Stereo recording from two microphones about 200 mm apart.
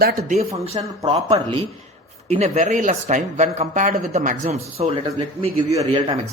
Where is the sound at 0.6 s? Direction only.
30° right (ahead or behind).